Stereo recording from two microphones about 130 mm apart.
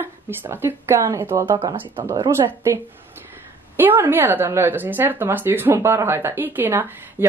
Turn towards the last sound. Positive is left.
turn(degrees=-15)  # may be behind; listen again after turning